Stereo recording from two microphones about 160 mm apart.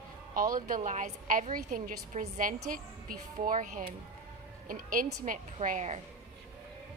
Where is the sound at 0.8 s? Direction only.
50° right (ahead or behind).